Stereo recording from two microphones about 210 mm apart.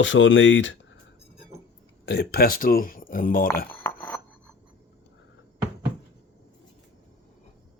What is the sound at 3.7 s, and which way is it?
Cutlery, 10° left (ahead or behind).